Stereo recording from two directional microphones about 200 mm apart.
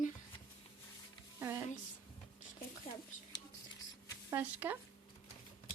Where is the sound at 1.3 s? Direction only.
10° right (ahead or behind).